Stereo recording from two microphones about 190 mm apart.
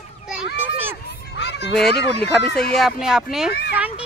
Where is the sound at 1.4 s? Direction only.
65° left (ahead or behind).